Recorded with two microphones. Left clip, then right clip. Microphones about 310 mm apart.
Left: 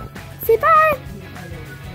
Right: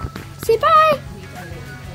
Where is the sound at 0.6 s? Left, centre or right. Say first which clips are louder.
Right 1 dB; centre.